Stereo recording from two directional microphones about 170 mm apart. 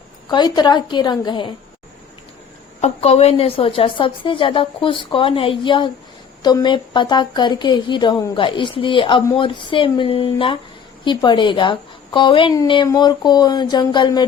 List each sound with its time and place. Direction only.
0.3 s a woman's voice: 25° left (ahead or behind)
2.8 s a woman's voice: 40° left (ahead or behind)